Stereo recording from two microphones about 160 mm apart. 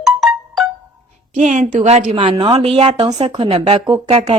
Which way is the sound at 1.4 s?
50° right (ahead or behind).